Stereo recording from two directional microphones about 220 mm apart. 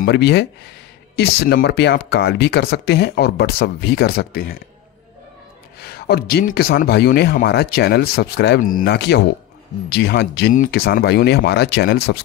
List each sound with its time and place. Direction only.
0.0 s speech: 50° left (ahead or behind)
5.8 s speech: 45° left (ahead or behind)